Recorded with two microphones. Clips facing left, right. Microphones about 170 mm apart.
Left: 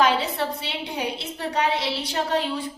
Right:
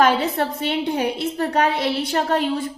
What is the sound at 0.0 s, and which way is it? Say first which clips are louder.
A woman's voice: right 4 dB; 50° right (ahead or behind).